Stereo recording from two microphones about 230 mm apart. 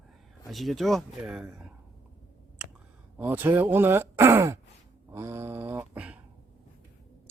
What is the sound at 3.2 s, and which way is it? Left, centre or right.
Speech, centre.